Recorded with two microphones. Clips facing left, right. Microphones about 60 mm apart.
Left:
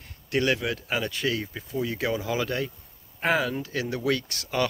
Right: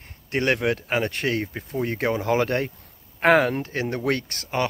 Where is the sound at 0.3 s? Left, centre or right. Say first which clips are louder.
Right 3 dB; right.